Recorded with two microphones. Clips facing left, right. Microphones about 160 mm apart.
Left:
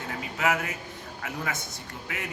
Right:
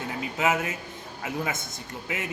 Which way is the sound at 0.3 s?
20° right (ahead or behind).